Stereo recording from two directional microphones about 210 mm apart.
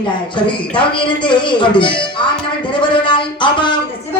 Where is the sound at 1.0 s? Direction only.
20° left (ahead or behind).